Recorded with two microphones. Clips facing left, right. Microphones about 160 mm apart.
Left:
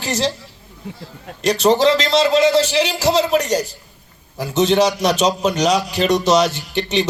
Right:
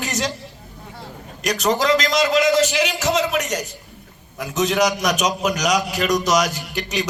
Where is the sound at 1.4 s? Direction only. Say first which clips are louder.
Left 5 dB; 30° left (ahead or behind).